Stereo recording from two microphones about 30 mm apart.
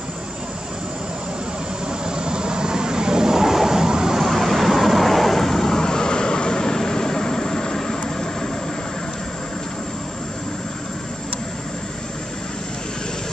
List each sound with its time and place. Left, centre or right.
1.9 s vehicle: right
4.2 s vehicle: centre